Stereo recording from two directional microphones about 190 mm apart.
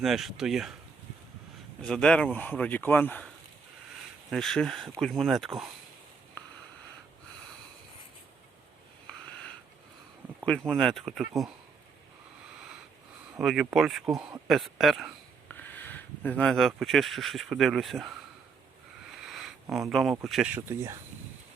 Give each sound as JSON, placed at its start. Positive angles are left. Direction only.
{"t": 0.0, "sound": "speech", "side_deg": 0}
{"t": 1.8, "sound": "speech", "side_deg": 5}
{"t": 4.3, "sound": "speech", "side_deg": 0}
{"t": 10.2, "sound": "a sound", "side_deg": -10}
{"t": 10.7, "sound": "speech", "side_deg": 5}
{"t": 13.4, "sound": "speech", "side_deg": 0}
{"t": 19.1, "sound": "a sound", "side_deg": 0}
{"t": 19.9, "sound": "speech", "side_deg": 0}
{"t": 20.6, "sound": "speech", "side_deg": -15}